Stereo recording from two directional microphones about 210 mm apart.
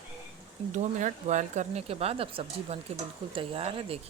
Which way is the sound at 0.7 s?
35° right (ahead or behind).